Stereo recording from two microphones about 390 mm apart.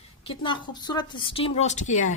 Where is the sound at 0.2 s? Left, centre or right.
Centre.